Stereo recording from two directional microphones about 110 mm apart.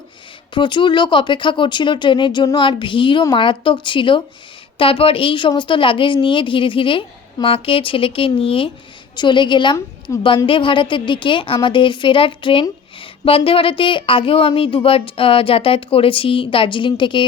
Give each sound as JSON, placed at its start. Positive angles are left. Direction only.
{"t": 0.5, "sound": "a woman's voice", "side_deg": 45}